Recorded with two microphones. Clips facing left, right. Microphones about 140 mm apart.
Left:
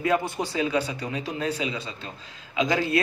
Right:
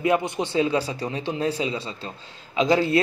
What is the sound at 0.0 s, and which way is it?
A man's voice, 20° right (ahead or behind).